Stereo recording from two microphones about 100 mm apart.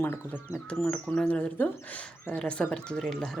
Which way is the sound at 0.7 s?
10° left (ahead or behind).